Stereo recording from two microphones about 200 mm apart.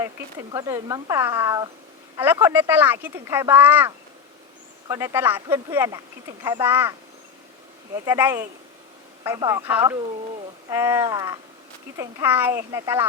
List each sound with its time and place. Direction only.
0.0 s speech: 15° right (ahead or behind)
8.0 s speech: 10° right (ahead or behind)